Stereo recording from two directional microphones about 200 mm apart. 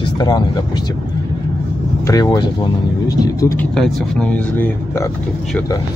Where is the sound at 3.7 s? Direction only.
5° left (ahead or behind).